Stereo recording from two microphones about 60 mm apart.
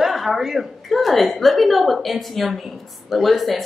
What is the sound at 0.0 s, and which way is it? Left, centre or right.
A woman's voice, centre.